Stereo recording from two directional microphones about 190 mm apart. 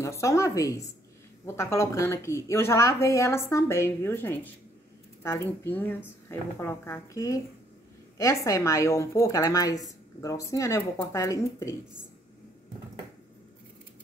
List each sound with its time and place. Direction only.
0.0 s a woman's voice: 15° left (ahead or behind)